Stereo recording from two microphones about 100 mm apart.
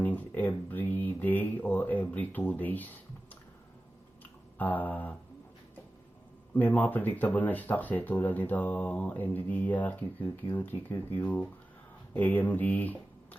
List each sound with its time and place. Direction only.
0.0 s a sound: 15° left (ahead or behind)
4.5 s speech: 15° left (ahead or behind)
6.5 s speech: 15° left (ahead or behind)